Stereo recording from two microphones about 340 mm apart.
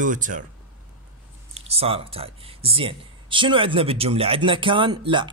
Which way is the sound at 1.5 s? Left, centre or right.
Centre.